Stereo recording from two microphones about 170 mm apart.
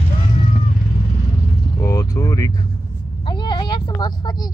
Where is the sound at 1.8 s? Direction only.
20° left (ahead or behind).